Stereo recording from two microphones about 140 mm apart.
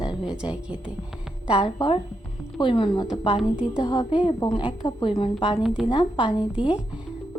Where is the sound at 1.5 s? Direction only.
40° left (ahead or behind).